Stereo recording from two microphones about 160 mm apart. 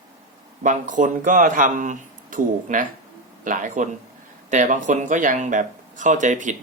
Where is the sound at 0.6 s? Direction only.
55° right (ahead or behind).